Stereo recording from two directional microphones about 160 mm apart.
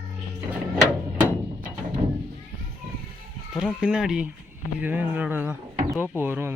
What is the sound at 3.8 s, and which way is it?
A man's voice, 5° right (ahead or behind).